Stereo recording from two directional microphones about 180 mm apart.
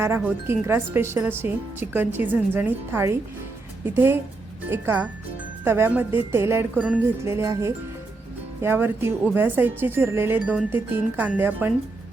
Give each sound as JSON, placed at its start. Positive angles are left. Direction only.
{"t": 0.0, "sound": "speech", "side_deg": -10}